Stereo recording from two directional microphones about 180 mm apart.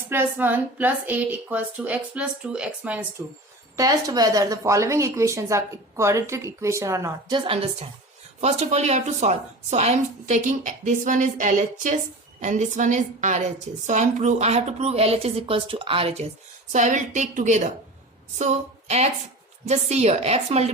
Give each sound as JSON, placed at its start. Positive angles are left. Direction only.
{"t": 0.1, "sound": "a woman's voice", "side_deg": -10}
{"t": 16.7, "sound": "a woman's voice", "side_deg": -45}